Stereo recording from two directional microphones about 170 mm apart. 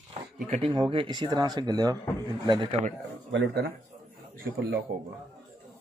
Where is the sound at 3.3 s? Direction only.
80° right.